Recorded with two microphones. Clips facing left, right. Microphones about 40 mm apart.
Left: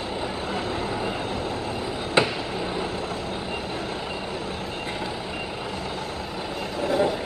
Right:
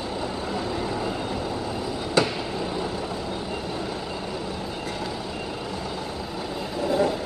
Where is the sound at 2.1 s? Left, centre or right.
Left.